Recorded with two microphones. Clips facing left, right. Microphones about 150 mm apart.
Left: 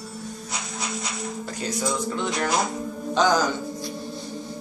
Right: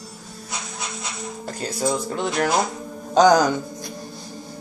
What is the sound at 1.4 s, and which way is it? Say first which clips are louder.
Speech: right 4 dB; 45° right (ahead or behind).